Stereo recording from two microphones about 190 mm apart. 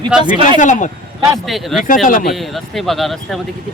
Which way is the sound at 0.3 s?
25° right (ahead or behind).